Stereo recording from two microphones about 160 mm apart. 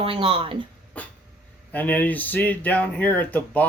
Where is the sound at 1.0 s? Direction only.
10° left (ahead or behind).